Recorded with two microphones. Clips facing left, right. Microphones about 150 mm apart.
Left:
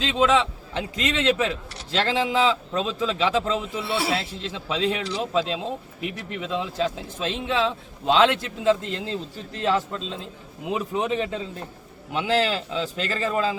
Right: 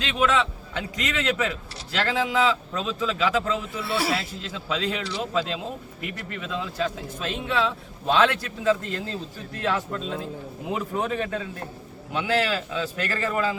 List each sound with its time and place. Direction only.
0.0 s a man's voice: 25° left (ahead or behind)